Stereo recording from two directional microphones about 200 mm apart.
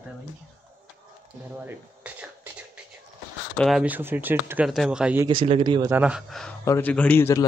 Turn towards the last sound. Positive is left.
turn(degrees=10)  # may be behind; listen again after turning